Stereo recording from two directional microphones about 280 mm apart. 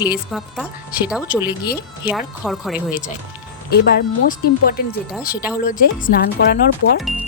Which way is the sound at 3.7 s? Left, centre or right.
Left.